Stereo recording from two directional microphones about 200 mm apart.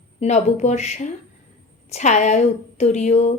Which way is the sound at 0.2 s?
35° left (ahead or behind).